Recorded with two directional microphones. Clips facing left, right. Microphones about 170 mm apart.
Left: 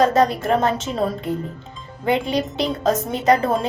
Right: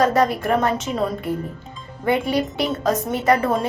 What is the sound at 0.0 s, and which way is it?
A woman's voice, 25° left (ahead or behind).